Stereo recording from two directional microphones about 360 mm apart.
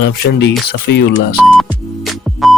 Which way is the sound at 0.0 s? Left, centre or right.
Left.